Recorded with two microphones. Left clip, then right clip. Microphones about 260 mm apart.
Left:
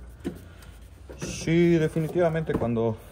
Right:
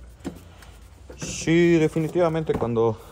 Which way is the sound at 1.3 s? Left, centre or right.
Right.